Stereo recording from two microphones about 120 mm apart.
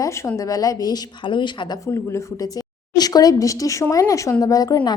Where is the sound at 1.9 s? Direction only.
25° left (ahead or behind).